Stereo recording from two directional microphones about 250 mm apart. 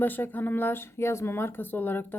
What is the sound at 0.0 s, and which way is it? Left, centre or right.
Speech, centre.